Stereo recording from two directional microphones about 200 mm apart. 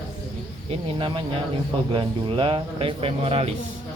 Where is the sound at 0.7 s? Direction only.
25° right (ahead or behind).